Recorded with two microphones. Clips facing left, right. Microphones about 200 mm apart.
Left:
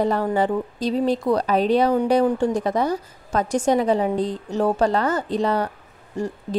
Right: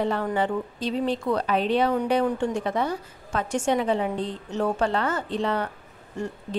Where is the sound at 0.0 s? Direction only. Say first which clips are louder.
Left 4 dB; 40° left (ahead or behind).